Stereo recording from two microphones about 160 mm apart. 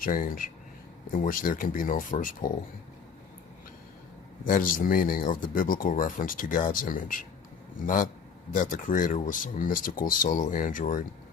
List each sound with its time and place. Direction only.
0.0 s speech: 60° left (ahead or behind)
4.4 s speech: 60° left (ahead or behind)